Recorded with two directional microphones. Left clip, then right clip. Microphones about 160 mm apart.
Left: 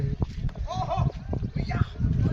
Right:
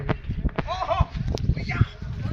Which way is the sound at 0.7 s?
10° left (ahead or behind).